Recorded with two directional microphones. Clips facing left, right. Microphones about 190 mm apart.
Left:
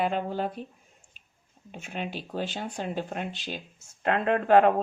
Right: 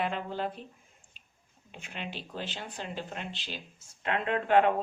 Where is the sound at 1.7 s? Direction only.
45° left (ahead or behind).